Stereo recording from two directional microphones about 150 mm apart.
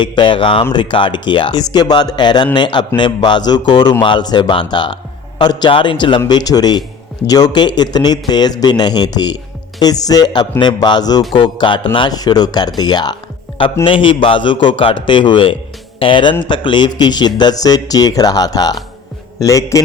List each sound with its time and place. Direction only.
0.0 s speech: 30° left (ahead or behind)